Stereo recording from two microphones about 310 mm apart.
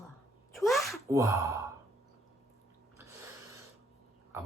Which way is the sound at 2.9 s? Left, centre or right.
Centre.